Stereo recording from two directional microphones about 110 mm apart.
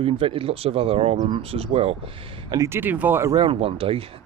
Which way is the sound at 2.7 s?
15° right (ahead or behind).